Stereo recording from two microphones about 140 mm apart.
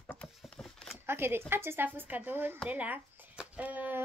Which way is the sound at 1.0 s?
15° right (ahead or behind).